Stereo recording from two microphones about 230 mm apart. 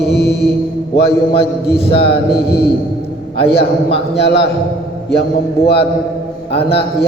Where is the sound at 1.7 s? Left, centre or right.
Left.